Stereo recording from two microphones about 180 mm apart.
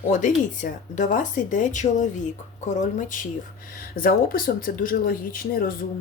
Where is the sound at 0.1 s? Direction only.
45° left (ahead or behind).